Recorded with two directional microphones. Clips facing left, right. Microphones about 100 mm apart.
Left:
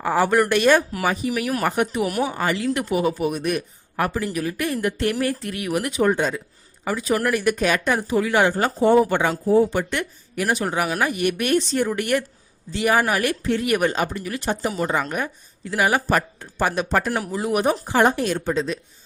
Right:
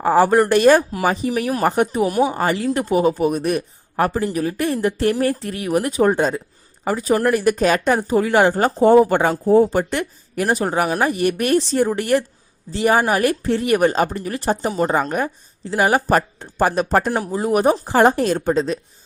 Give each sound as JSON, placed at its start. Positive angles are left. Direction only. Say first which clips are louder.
{"t": 0.0, "sound": "speech", "louder": "right 5 dB", "side_deg": -35}
{"t": 2.4, "sound": "speech", "louder": "right 3 dB", "side_deg": -35}